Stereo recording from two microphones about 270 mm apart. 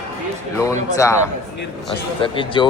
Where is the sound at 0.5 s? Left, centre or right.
Centre.